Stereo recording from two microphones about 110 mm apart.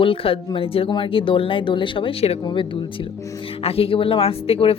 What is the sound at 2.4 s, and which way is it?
Speech, 50° left (ahead or behind).